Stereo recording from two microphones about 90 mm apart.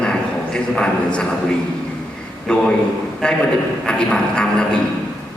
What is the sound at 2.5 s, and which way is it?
A man's voice, 10° left (ahead or behind).